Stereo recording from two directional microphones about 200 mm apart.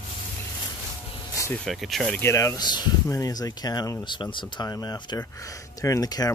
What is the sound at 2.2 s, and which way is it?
Speech, 15° left (ahead or behind).